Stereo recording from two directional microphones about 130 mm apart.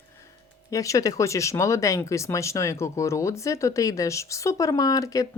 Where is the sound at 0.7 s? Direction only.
25° left (ahead or behind).